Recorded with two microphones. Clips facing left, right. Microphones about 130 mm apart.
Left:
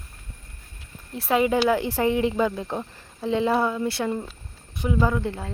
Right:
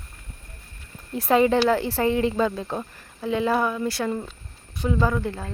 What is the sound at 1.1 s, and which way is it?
Speech, 5° left (ahead or behind).